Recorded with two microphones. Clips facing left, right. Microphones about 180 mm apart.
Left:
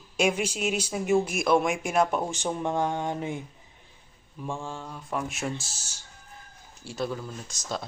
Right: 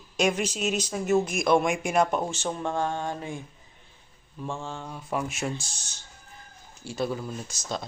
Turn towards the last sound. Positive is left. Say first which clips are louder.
# right 1 dB
turn(degrees=0)  # may be behind; listen again after turning